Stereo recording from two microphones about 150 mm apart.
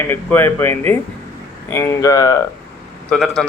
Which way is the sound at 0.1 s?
15° left (ahead or behind).